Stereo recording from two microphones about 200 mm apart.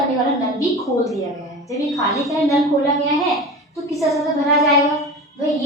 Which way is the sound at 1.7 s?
15° left (ahead or behind).